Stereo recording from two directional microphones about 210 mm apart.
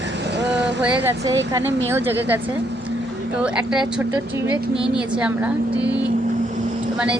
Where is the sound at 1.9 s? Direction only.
10° right (ahead or behind).